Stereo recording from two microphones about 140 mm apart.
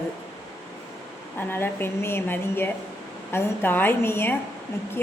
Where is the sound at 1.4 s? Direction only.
15° left (ahead or behind).